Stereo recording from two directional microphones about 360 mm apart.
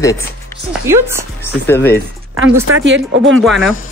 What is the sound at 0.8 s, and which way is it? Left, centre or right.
Speech, centre.